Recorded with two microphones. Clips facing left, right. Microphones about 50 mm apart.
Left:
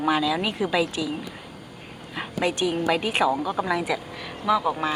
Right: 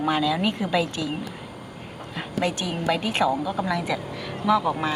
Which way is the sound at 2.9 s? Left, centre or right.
Centre.